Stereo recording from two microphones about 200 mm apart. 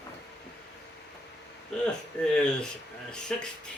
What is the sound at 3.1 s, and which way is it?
Speech, 5° left (ahead or behind).